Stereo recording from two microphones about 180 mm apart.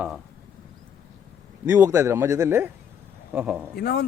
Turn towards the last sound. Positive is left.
turn(degrees=65)  # may be behind; listen again after turning